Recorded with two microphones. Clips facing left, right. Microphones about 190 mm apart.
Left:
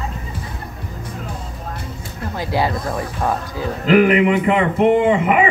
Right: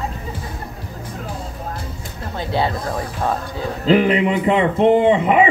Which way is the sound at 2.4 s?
25° right (ahead or behind).